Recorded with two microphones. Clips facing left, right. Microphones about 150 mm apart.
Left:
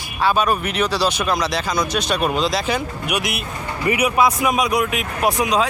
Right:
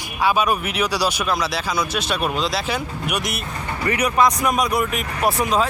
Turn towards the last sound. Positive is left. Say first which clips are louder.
# left 1 dB
turn(degrees=0)  # may be behind; listen again after turning